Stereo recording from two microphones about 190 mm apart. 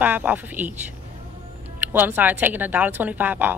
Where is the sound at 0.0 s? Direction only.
10° right (ahead or behind).